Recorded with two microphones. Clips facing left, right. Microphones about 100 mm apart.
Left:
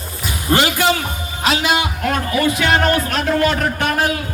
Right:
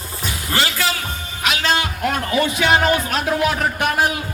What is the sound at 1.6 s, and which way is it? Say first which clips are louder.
Speech: left 2 dB; 15° left (ahead or behind).